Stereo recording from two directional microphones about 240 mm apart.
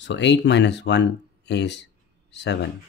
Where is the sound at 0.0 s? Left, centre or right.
Left.